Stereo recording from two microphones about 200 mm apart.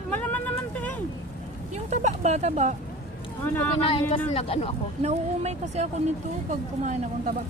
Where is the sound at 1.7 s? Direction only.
35° right (ahead or behind).